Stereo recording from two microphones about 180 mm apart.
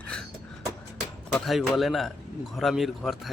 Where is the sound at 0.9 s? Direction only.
Centre (ahead or behind).